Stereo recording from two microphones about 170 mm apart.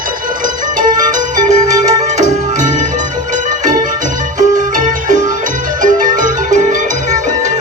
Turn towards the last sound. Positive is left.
turn(degrees=-50)  # may be behind; listen again after turning